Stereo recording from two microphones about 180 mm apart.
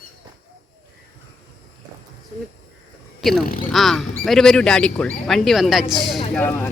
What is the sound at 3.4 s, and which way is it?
Speech, 50° left (ahead or behind).